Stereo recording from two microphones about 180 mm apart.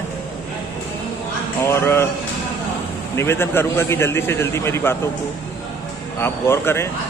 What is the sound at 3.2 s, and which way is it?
A man's voice, 15° left (ahead or behind).